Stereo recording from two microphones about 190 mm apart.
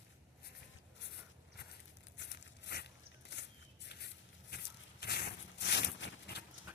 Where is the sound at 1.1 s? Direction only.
60° left (ahead or behind).